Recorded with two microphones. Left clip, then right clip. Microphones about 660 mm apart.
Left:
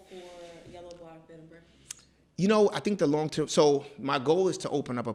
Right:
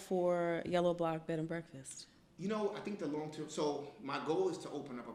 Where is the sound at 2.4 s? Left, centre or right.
Left.